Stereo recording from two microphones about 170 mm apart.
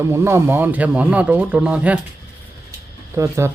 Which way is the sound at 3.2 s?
15° right (ahead or behind).